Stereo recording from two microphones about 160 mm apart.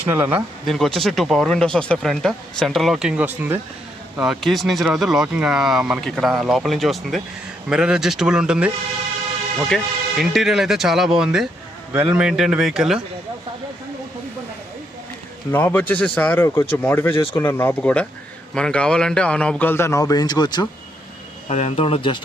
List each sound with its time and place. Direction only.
0.0 s speech: 15° right (ahead or behind)
0.7 s speech: centre (ahead or behind)
15.5 s a man's voice: 10° left (ahead or behind); by 20.7 s 25° left (ahead or behind)
21.5 s speech: 40° left (ahead or behind)